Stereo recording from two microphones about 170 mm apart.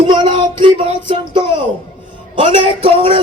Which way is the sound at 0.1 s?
25° right (ahead or behind).